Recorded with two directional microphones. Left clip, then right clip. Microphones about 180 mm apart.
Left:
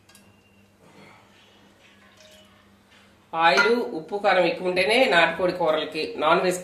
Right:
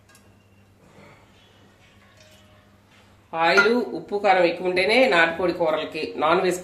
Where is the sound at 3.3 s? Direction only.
40° right (ahead or behind).